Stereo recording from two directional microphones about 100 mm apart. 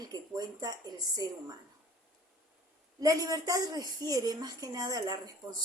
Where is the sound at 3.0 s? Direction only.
35° right (ahead or behind).